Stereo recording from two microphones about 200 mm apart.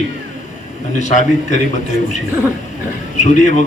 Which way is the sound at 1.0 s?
40° left (ahead or behind).